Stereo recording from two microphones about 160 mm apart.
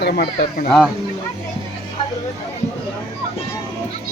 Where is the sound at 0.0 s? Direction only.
90° left.